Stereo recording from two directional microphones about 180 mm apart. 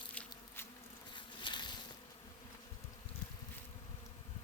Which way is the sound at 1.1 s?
25° left (ahead or behind).